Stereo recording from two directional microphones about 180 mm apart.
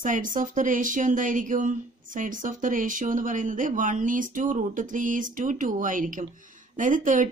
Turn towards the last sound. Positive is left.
turn(degrees=-45)  # may be behind; listen again after turning